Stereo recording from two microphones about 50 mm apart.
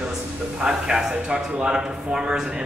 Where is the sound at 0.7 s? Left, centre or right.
Centre.